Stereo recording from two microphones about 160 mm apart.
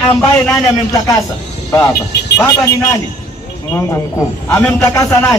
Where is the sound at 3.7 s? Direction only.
20° left (ahead or behind).